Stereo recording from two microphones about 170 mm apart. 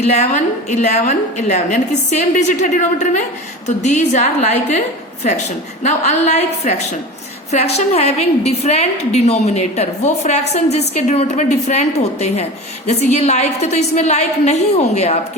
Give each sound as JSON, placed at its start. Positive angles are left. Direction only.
{"t": 0.0, "sound": "a woman's voice", "side_deg": 40}
{"t": 5.8, "sound": "a woman's voice", "side_deg": 40}